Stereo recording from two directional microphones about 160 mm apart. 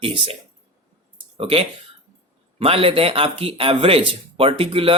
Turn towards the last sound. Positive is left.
turn(degrees=-35)  # may be behind; listen again after turning